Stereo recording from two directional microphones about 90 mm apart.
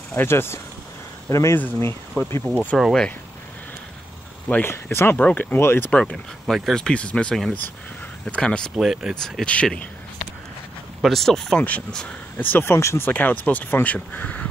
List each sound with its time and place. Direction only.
0.1 s speech: 25° left (ahead or behind)
2.2 s speech: 15° left (ahead or behind)
4.5 s speech: 20° left (ahead or behind)
5.9 s speech: 10° left (ahead or behind)
6.4 s speech: centre (ahead or behind)
8.7 s speech: 5° right (ahead or behind)
9.1 s speech: 10° left (ahead or behind)
11.0 s speech: 5° left (ahead or behind)